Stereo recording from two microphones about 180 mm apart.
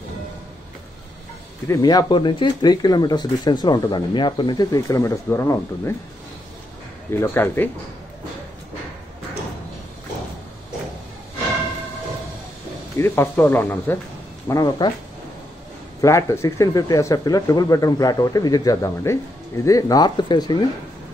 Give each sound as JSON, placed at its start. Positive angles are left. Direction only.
{"t": 1.7, "sound": "speech", "side_deg": 20}
{"t": 7.1, "sound": "speech", "side_deg": 10}
{"t": 12.9, "sound": "speech", "side_deg": 15}
{"t": 14.5, "sound": "speech", "side_deg": 20}
{"t": 16.0, "sound": "speech", "side_deg": 20}